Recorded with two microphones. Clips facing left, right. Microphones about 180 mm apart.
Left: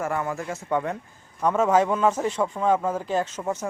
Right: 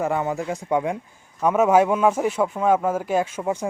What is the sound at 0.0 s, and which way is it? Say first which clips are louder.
A man's voice: right 4 dB; 20° right (ahead or behind).